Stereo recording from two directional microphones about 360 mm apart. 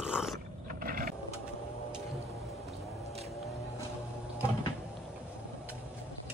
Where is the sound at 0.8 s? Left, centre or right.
Right.